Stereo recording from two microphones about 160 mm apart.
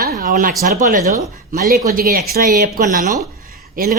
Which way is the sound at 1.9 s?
65° right (ahead or behind).